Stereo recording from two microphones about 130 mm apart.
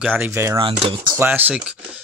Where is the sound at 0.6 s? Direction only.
40° right (ahead or behind).